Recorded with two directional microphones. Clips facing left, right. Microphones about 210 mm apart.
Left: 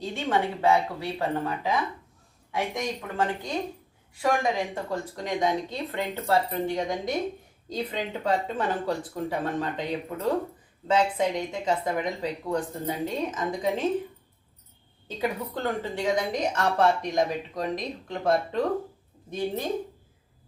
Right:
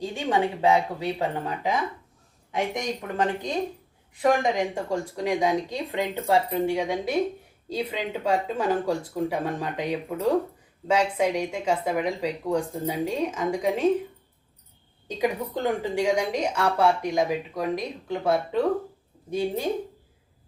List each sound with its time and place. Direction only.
0.0 s a woman's voice: 15° right (ahead or behind)
15.0 s a woman's voice: 15° right (ahead or behind)